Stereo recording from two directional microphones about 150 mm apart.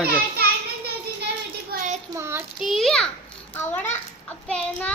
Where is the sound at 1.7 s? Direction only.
90° right.